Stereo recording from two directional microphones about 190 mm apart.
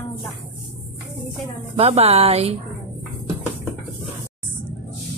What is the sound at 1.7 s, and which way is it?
Speech, 35° right (ahead or behind).